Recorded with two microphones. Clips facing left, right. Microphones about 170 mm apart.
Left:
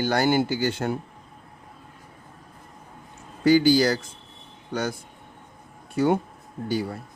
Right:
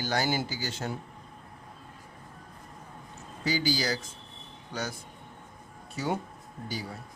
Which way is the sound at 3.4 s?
55° left (ahead or behind).